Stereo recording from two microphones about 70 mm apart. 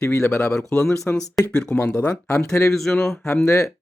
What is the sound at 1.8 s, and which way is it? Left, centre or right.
Speech, left.